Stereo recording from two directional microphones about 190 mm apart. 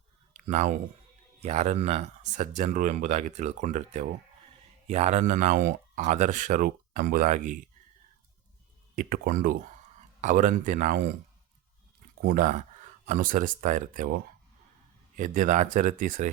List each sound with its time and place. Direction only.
0.4 s speech: 40° right (ahead or behind)
9.0 s speech: 50° right (ahead or behind)
12.2 s speech: 45° right (ahead or behind)